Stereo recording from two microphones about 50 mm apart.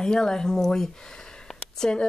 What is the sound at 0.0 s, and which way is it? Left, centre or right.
A woman's voice, centre.